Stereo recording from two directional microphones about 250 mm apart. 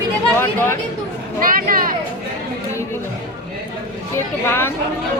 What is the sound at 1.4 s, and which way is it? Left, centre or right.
Speech, right.